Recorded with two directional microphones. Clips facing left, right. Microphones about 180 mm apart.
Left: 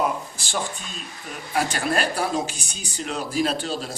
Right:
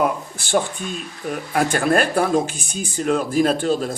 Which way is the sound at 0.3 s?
55° right (ahead or behind).